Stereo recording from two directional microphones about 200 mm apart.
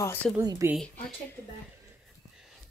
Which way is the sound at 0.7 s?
5° left (ahead or behind).